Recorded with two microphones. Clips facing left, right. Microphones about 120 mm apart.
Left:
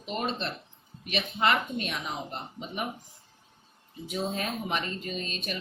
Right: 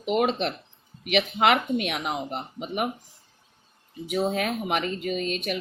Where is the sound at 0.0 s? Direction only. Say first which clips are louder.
Right 8 dB; 75° right (ahead or behind).